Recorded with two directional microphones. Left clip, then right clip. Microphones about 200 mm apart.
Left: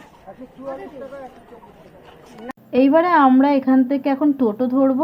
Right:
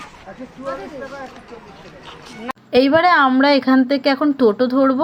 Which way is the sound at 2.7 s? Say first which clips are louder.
Right 2 dB; 20° right (ahead or behind).